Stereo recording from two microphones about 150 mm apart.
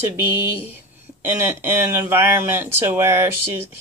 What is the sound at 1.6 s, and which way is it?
Speech, 15° right (ahead or behind).